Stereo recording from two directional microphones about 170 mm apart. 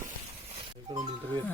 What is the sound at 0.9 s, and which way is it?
Speech, 25° right (ahead or behind).